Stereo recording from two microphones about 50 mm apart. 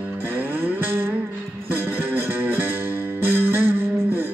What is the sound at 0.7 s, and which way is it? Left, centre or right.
Music, right.